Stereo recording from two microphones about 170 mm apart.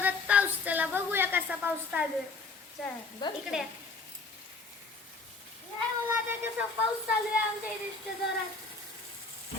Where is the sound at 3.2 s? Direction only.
25° left (ahead or behind).